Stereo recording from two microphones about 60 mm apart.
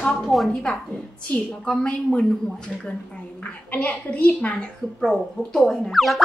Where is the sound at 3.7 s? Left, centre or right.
Left.